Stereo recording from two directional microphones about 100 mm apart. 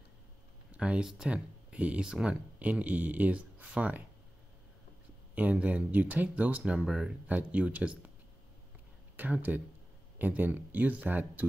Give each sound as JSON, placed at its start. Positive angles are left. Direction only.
{"t": 0.7, "sound": "speech", "side_deg": -10}
{"t": 5.3, "sound": "speech", "side_deg": -15}
{"t": 9.1, "sound": "speech", "side_deg": -20}